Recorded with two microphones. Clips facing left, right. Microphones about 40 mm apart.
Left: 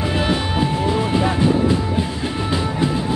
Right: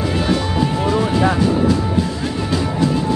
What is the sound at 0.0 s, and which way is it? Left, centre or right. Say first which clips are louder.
Music: right 1 dB; left.